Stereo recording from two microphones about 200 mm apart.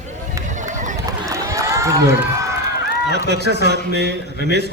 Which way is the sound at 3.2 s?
55° right (ahead or behind).